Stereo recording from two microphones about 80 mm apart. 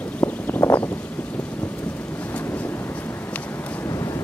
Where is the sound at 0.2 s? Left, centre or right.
Centre.